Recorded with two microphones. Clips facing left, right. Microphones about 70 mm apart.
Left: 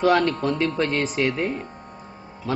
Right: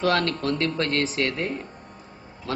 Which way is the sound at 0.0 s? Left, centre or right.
Centre.